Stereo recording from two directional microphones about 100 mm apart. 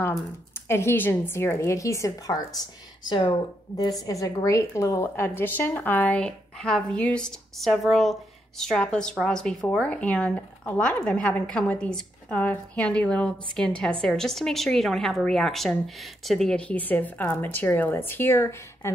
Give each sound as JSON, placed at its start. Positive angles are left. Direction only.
{"t": 0.7, "sound": "a woman's voice", "side_deg": 25}
{"t": 3.1, "sound": "speech", "side_deg": 50}
{"t": 4.0, "sound": "a woman's voice", "side_deg": 35}